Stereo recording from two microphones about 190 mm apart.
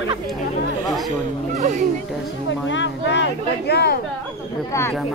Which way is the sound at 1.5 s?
40° right (ahead or behind).